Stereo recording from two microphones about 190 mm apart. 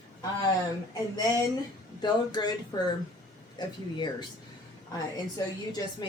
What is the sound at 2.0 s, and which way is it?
Speech, 20° left (ahead or behind).